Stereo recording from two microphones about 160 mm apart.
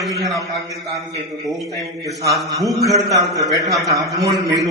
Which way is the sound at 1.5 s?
Centre (ahead or behind).